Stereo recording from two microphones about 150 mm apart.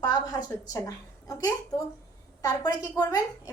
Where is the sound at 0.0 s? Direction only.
25° left (ahead or behind).